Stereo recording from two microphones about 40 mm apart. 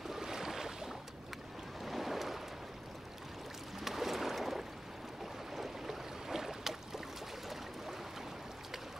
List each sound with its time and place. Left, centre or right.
0.1 s a sound: centre
1.8 s boat: centre
3.8 s boat: centre